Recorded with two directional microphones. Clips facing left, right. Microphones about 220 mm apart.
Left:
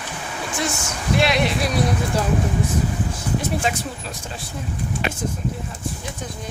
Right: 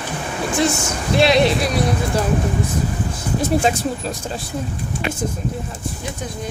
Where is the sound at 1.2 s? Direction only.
30° right (ahead or behind).